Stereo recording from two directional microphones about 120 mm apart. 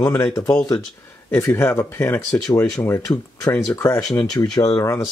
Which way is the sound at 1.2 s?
20° left (ahead or behind).